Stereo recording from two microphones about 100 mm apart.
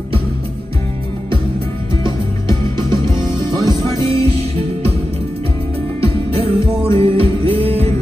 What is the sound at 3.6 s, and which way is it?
Music, 45° right (ahead or behind).